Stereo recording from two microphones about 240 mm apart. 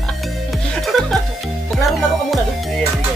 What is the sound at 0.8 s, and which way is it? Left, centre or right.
Music, centre.